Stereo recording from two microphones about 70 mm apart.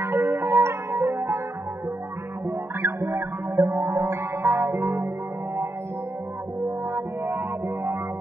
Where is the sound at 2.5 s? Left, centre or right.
Right.